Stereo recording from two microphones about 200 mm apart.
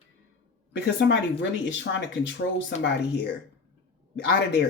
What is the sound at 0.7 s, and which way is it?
Speech, 60° left (ahead or behind).